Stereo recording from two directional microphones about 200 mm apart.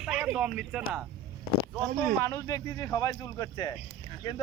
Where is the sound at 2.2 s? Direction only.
15° left (ahead or behind).